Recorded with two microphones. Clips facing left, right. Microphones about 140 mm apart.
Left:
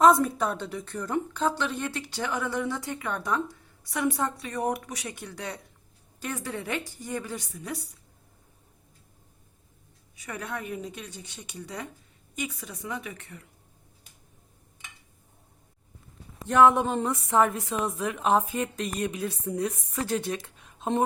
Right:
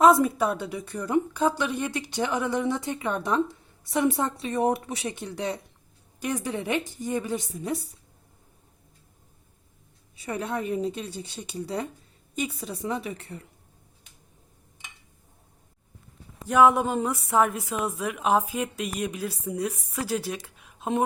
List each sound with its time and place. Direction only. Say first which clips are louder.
0.0 s a woman's voice: right 1 dB; 5° right (ahead or behind); by 7.8 s 25° right (ahead or behind)
10.2 s a woman's voice: right 6 dB; 30° right (ahead or behind)
16.5 s a woman's voice: even; 10° right (ahead or behind)